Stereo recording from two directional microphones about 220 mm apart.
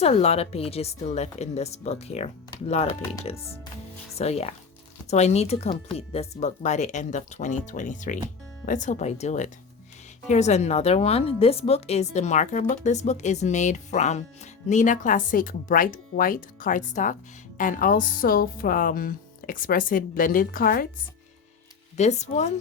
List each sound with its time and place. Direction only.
0.0 s a woman's voice: 30° left (ahead or behind)
4.2 s a woman's voice: 30° left (ahead or behind)
21.9 s speech: 30° left (ahead or behind)